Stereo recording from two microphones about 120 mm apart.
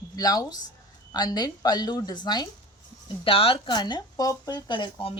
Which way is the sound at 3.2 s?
50° left (ahead or behind).